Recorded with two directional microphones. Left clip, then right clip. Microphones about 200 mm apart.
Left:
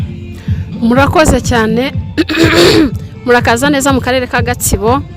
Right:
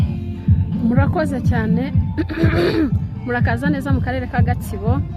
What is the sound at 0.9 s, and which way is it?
Speech, 50° left (ahead or behind).